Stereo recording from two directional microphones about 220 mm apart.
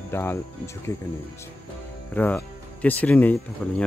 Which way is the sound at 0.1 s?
10° left (ahead or behind).